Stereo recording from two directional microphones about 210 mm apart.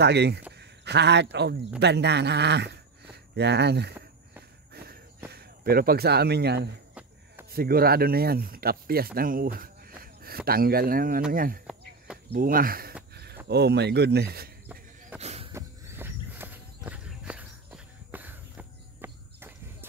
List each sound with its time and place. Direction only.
0.0 s speech: 50° right (ahead or behind)
5.3 s speech: 50° right (ahead or behind)
13.1 s a sound: 50° right (ahead or behind)
13.5 s speech: 50° right (ahead or behind)
15.1 s a sound: 30° right (ahead or behind)
15.5 s walk: 10° right (ahead or behind)